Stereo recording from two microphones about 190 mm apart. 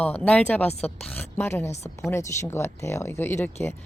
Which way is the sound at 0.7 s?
35° left (ahead or behind).